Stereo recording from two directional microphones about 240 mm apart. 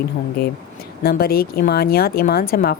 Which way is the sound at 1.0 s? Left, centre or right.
Left.